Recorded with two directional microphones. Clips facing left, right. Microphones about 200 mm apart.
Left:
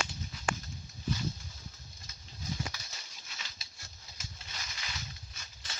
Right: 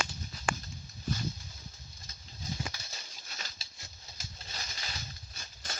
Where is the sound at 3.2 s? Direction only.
40° right (ahead or behind).